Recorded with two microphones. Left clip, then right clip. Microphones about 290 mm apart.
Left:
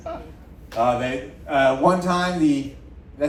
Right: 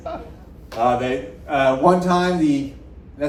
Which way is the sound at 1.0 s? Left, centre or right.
Left.